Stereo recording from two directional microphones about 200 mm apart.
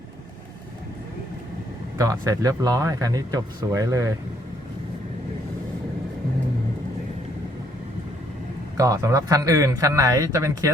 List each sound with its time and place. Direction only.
2.0 s speech: 15° right (ahead or behind)
8.8 s speech: 15° right (ahead or behind)